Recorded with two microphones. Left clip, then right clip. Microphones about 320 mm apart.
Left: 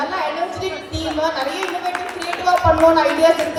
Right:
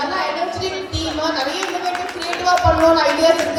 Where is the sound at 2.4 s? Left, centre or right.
Left.